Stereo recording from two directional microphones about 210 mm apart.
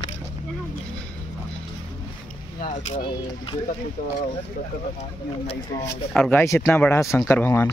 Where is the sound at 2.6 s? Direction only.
35° left (ahead or behind).